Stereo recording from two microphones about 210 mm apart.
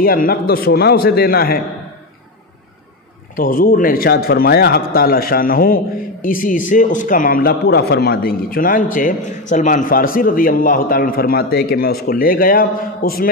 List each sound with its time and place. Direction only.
0.0 s a man's voice: 45° left (ahead or behind)
3.3 s a man's voice: 40° left (ahead or behind)